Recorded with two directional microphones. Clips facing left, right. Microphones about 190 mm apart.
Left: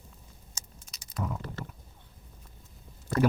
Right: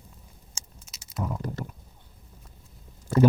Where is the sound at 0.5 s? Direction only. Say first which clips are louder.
Right 2 dB; 5° right (ahead or behind).